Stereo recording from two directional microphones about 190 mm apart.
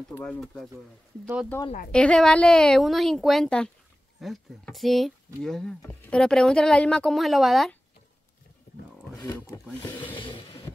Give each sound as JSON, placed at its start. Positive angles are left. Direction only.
{"t": 0.2, "sound": "speech", "side_deg": 5}
{"t": 1.9, "sound": "speech", "side_deg": 5}
{"t": 8.7, "sound": "roaring cats", "side_deg": 60}
{"t": 9.7, "sound": "speech", "side_deg": 10}
{"t": 10.1, "sound": "train", "side_deg": 30}